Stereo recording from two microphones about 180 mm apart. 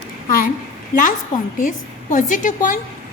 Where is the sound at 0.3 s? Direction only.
55° left (ahead or behind).